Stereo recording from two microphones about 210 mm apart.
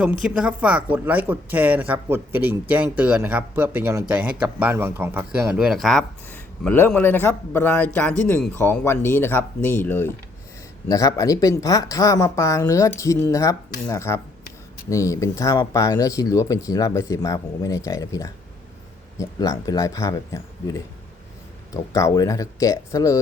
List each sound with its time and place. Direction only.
0.0 s a woman's voice: 5° right (ahead or behind); by 23.2 s 15° left (ahead or behind)